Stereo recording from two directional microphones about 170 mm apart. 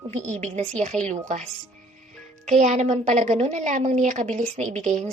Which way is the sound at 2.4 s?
45° right (ahead or behind).